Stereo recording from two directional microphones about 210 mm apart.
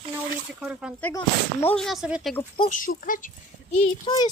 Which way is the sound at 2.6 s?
40° left (ahead or behind).